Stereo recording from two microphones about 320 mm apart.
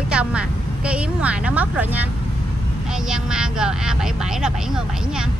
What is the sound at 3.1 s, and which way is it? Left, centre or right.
Speech, centre.